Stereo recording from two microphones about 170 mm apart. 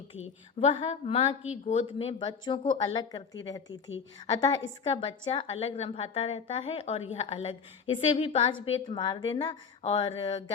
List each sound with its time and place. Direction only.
0.6 s a woman's voice: 35° left (ahead or behind)